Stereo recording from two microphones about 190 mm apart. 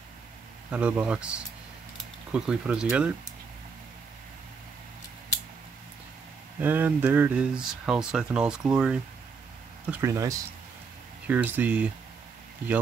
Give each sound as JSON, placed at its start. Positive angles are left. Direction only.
{"t": 0.7, "sound": "speech", "side_deg": -5}
{"t": 6.6, "sound": "speech", "side_deg": -10}